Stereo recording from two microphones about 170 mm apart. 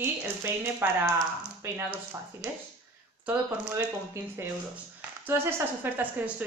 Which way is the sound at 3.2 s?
5° right (ahead or behind).